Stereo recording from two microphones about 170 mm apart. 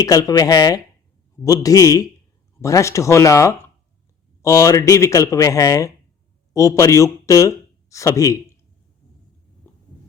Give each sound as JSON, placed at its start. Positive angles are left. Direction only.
{"t": 0.0, "sound": "speech", "side_deg": 20}
{"t": 9.7, "sound": "heart sounds", "side_deg": 15}